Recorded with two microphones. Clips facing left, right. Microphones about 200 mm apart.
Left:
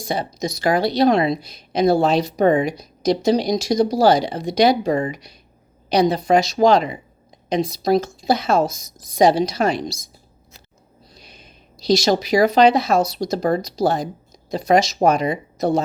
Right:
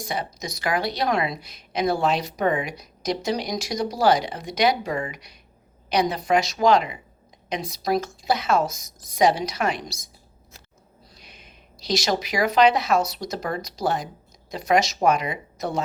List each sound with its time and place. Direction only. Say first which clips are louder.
0.1 s speech: left 8 dB; 30° left (ahead or behind)
11.2 s speech: left 3 dB; 35° left (ahead or behind)